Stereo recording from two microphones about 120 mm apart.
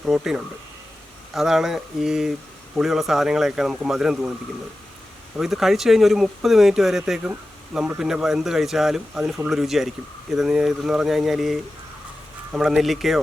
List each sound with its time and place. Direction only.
0.0 s speech: 5° right (ahead or behind)
5.4 s speech: centre (ahead or behind)